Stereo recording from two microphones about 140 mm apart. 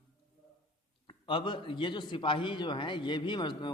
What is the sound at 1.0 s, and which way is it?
A man's voice, 35° left (ahead or behind).